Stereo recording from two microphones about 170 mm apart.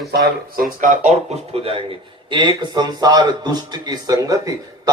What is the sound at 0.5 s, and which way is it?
A man's voice, 55° right (ahead or behind).